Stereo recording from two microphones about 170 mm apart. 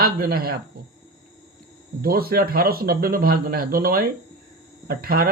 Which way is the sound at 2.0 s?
60° right (ahead or behind).